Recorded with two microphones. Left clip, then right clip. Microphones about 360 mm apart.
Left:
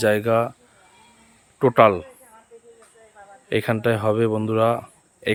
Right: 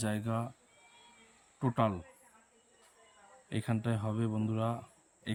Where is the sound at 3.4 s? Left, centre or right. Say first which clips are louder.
Left 17 dB; centre.